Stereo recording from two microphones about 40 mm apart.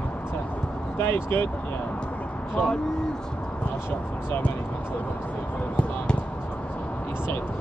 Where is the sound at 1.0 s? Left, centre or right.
Left.